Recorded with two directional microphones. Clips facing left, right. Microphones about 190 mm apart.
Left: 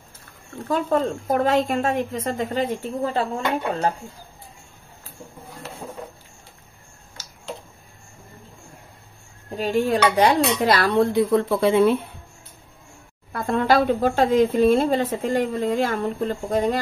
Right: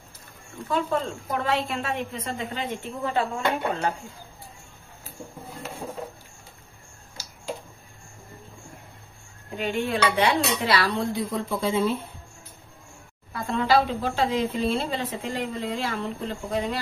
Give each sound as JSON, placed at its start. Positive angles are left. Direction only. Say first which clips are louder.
{"t": 0.7, "sound": "speech", "louder": "left 5 dB", "side_deg": 45}
{"t": 9.6, "sound": "speech", "louder": "left 5 dB", "side_deg": 40}
{"t": 13.3, "sound": "speech", "louder": "left 3 dB", "side_deg": 50}